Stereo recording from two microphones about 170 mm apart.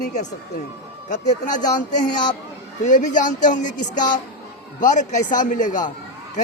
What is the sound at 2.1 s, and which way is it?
Speech, 25° left (ahead or behind).